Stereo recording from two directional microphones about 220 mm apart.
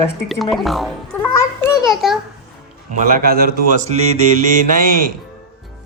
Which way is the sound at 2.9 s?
40° right (ahead or behind).